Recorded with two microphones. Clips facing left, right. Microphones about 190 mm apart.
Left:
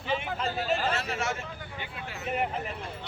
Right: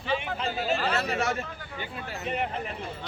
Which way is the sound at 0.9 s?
40° right (ahead or behind).